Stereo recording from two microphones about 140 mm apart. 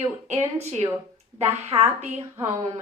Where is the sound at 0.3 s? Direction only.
50° right (ahead or behind).